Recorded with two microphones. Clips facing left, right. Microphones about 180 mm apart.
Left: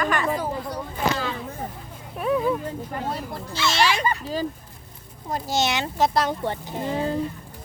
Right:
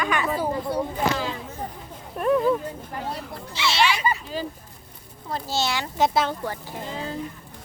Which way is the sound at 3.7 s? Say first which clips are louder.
Even; 45° left (ahead or behind).